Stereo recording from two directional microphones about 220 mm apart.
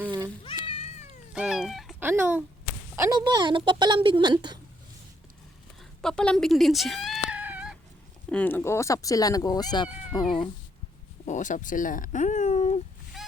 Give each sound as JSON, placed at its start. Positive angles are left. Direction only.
{"t": 0.4, "sound": "cat", "side_deg": 25}
{"t": 1.3, "sound": "cat", "side_deg": -5}
{"t": 2.9, "sound": "a woman's voice", "side_deg": -15}
{"t": 6.0, "sound": "cat", "side_deg": 5}
{"t": 8.3, "sound": "speech", "side_deg": 5}
{"t": 10.1, "sound": "cat", "side_deg": 20}
{"t": 11.3, "sound": "speech", "side_deg": 35}